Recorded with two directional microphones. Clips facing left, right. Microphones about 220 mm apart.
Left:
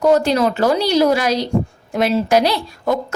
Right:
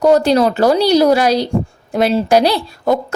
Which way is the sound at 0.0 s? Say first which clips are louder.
Right 3 dB; 35° right (ahead or behind).